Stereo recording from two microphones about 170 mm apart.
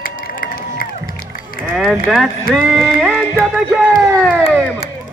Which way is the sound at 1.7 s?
Centre (ahead or behind).